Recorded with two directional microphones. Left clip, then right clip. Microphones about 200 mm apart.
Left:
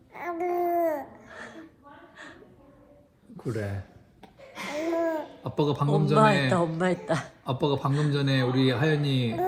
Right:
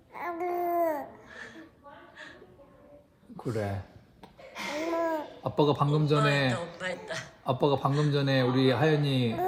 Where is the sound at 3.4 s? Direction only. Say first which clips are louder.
Right 1 dB; 20° right (ahead or behind).